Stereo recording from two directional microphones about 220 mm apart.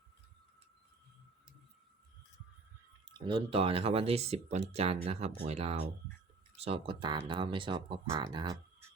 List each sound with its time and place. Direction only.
3.1 s speech: 20° right (ahead or behind)